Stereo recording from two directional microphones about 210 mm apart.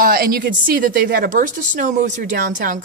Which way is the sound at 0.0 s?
45° right (ahead or behind).